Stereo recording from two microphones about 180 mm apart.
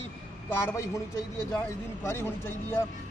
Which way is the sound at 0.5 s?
15° left (ahead or behind).